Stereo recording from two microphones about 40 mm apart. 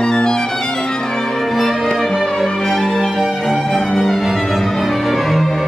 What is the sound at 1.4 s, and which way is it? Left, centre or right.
Music, centre.